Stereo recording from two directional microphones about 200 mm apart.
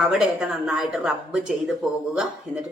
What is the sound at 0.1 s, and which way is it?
Speech, 5° right (ahead or behind).